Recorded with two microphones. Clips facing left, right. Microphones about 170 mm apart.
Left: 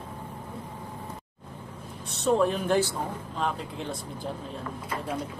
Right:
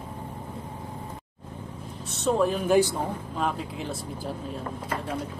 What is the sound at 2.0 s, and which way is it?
Speech, centre (ahead or behind).